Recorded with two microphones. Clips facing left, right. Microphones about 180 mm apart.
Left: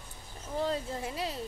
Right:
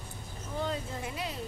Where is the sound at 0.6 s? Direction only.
35° left (ahead or behind).